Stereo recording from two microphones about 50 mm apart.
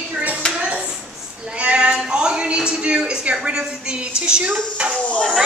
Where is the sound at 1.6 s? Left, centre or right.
Right.